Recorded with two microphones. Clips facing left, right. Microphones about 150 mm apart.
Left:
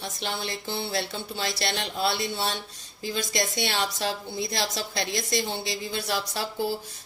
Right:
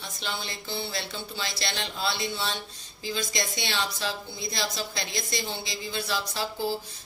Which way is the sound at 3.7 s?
45° left (ahead or behind).